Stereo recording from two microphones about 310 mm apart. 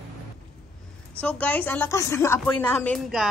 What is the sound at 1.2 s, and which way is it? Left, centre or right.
A woman's voice, centre.